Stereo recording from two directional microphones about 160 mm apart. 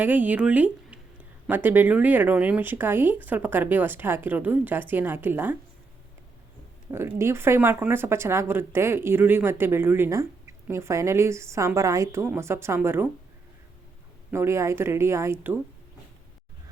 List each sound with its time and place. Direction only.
0.0 s speech: 10° right (ahead or behind)
6.9 s speech: 15° right (ahead or behind)
14.3 s speech: 15° right (ahead or behind)